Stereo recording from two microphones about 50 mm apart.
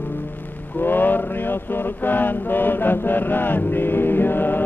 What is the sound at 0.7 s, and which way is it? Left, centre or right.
Mantra, left.